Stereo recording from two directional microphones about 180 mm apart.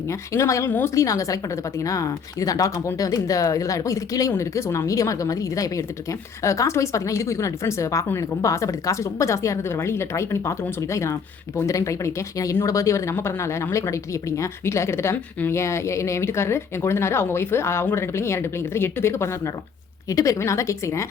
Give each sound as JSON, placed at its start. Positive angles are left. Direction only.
{"t": 0.1, "sound": "speech", "side_deg": 15}